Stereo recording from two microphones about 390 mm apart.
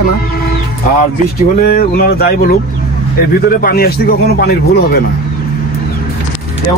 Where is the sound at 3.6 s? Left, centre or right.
Left.